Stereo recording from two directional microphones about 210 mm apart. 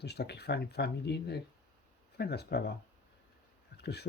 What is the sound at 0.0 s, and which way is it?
Speech, 50° left (ahead or behind).